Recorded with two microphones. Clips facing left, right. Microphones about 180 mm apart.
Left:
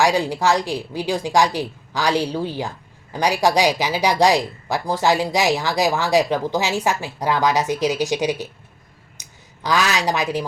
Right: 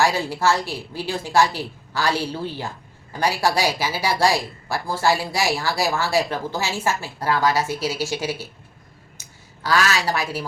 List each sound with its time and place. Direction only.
0.0 s speech: 15° left (ahead or behind)
9.2 s a sound: 20° left (ahead or behind)
9.6 s speech: 15° left (ahead or behind)